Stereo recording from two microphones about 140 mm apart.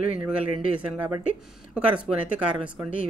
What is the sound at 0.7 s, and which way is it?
Speech, 10° right (ahead or behind).